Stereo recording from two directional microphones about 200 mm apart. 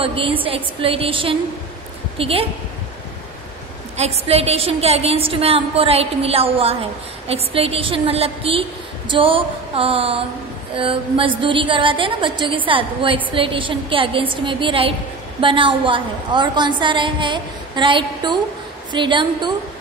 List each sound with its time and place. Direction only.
0.0 s a woman's voice: 25° right (ahead or behind)
3.9 s a woman's voice: 30° right (ahead or behind)